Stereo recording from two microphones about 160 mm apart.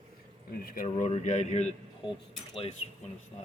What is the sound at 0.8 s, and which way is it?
Speech, 40° left (ahead or behind).